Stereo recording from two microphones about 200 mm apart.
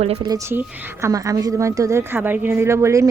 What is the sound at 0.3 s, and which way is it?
Speech, 15° right (ahead or behind).